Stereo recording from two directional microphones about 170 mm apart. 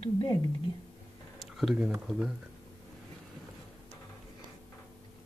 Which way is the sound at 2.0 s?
Centre (ahead or behind).